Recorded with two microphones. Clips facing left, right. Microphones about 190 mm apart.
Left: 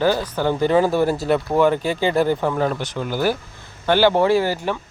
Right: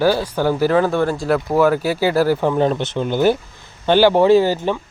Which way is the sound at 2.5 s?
20° right (ahead or behind).